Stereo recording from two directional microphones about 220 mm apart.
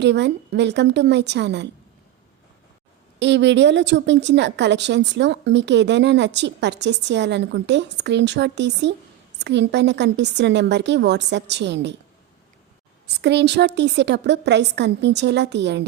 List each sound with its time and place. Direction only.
0.0 s a woman's voice: 50° right (ahead or behind)
3.2 s a woman's voice: 55° right (ahead or behind)
13.2 s a woman's voice: 50° right (ahead or behind)